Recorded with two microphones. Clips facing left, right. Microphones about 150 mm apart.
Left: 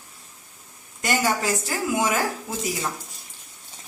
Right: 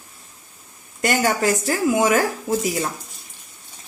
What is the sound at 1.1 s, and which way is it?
A woman's voice, 60° right (ahead or behind).